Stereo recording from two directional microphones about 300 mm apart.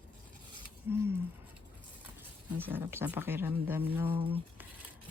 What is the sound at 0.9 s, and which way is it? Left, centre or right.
Speech, centre.